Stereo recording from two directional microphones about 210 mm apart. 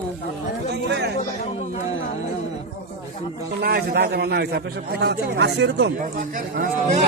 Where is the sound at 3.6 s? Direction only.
45° right (ahead or behind).